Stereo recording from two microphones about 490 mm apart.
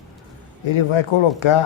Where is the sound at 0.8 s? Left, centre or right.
Left.